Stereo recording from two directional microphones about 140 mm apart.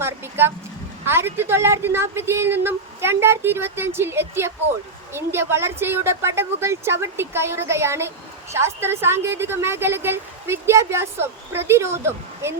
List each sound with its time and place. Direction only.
0.0 s boat: 15° right (ahead or behind)
1.0 s a woman's voice: 15° right (ahead or behind)